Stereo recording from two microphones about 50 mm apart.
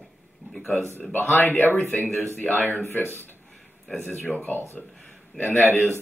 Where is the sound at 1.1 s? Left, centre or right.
Left.